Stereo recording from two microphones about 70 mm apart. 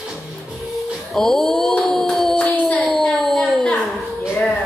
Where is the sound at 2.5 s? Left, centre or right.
Left.